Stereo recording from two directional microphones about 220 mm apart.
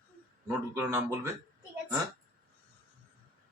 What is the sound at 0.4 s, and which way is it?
Speech, 10° right (ahead or behind).